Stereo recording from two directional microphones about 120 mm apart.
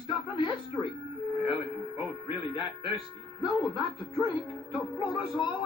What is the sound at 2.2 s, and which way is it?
Speech, 40° left (ahead or behind).